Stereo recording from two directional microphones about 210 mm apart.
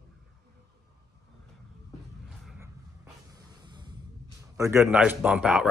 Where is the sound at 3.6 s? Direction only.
20° right (ahead or behind).